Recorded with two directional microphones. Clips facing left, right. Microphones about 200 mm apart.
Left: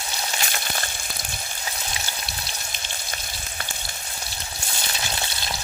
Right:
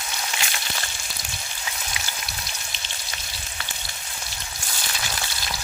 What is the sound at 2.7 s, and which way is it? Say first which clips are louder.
Frying: left 3 dB; 50° left (ahead or behind).